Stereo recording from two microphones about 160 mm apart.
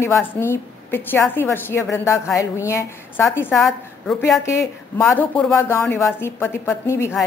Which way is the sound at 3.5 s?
Centre (ahead or behind).